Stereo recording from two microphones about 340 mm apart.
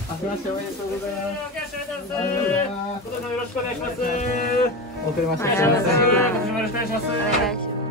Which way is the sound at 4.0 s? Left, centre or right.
Left.